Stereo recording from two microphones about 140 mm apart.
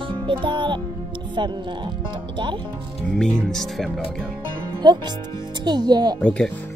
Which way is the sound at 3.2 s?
5° left (ahead or behind).